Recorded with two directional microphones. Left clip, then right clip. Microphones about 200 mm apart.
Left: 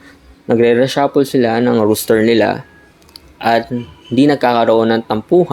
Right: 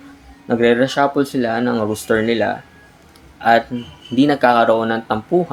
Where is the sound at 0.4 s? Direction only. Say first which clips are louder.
Left 3 dB; 40° left (ahead or behind).